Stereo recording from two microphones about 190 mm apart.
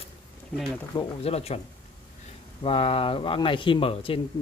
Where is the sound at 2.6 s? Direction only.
30° left (ahead or behind).